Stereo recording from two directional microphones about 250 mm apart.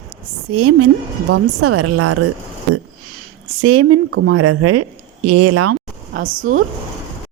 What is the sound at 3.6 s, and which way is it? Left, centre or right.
Speech, right.